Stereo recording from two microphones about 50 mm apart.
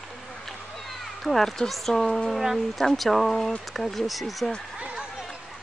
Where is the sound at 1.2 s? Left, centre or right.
Centre.